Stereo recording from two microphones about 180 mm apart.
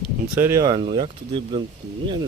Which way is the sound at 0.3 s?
15° right (ahead or behind).